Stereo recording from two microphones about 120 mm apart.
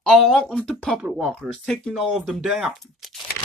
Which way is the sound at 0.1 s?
5° left (ahead or behind).